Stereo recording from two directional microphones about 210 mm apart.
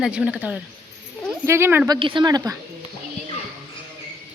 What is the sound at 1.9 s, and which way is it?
Speech, 25° right (ahead or behind).